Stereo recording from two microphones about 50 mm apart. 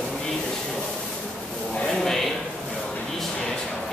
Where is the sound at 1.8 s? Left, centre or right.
Centre.